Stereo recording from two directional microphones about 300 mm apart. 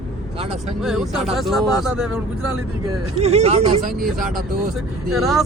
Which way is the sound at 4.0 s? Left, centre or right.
Centre.